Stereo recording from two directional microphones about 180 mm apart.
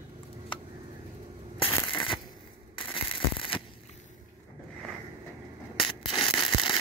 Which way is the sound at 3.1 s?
30° left (ahead or behind).